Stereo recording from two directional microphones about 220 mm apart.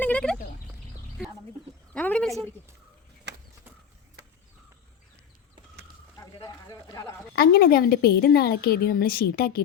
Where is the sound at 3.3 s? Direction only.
50° right (ahead or behind).